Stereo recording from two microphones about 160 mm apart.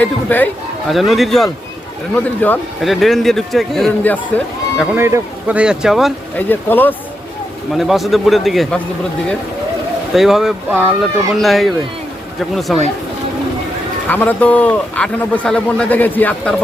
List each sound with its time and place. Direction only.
0.0 s a man's voice: 10° left (ahead or behind)
0.9 s a man's voice: centre (ahead or behind)
2.1 s a man's voice: 10° left (ahead or behind)
2.8 s a man's voice: centre (ahead or behind)
4.9 s speech: 15° right (ahead or behind)
6.3 s a man's voice: 10° left (ahead or behind)
7.7 s a man's voice: centre (ahead or behind)
10.2 s a man's voice: centre (ahead or behind)
14.1 s a man's voice: 10° left (ahead or behind)